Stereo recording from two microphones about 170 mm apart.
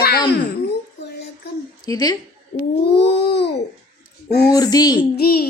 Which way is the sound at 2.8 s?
80° left.